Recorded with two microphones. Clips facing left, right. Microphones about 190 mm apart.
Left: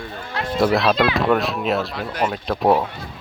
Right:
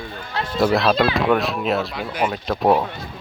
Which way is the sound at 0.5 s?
Centre (ahead or behind).